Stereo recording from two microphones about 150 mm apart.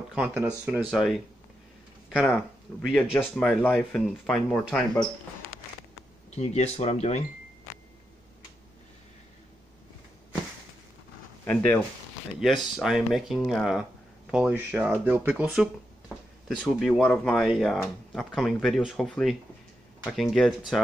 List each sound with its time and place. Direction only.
0.1 s speech: 5° right (ahead or behind)
0.8 s speech: centre (ahead or behind)
6.3 s speech: 45° left (ahead or behind)
11.4 s speech: 10° left (ahead or behind)
12.4 s speech: centre (ahead or behind)